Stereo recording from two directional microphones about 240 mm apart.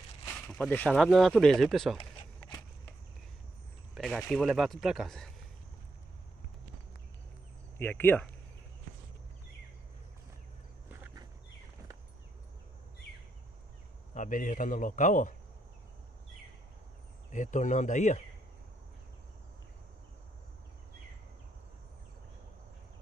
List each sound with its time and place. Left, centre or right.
0.2 s speech: centre
3.9 s speech: centre
7.7 s speech: centre
14.1 s speech: left
17.3 s speech: left